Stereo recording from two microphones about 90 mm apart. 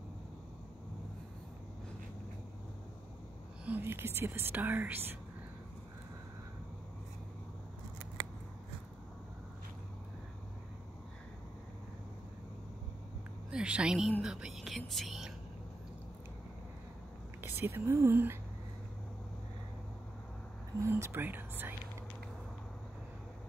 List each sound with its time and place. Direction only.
3.6 s speech: 20° right (ahead or behind)
13.5 s speech: 10° right (ahead or behind)
17.4 s speech: 25° right (ahead or behind)
20.8 s speech: 25° right (ahead or behind)